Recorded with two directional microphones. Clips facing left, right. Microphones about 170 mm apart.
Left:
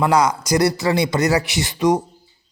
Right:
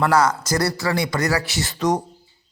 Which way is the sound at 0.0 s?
15° left (ahead or behind).